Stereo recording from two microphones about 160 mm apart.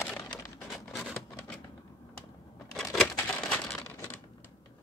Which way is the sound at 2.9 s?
5° left (ahead or behind).